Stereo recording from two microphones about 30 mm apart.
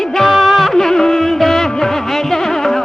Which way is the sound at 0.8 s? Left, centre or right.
Centre.